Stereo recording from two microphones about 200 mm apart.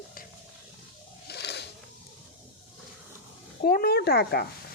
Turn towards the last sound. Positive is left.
turn(degrees=55)  # may be behind; listen again after turning